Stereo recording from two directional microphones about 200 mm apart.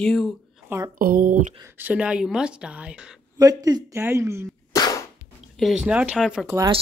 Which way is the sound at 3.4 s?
20° right (ahead or behind).